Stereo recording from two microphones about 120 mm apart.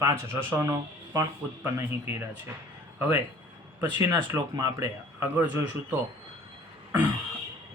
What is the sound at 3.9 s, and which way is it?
Speech, 35° right (ahead or behind).